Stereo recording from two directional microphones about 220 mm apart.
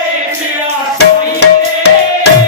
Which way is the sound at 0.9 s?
50° left (ahead or behind).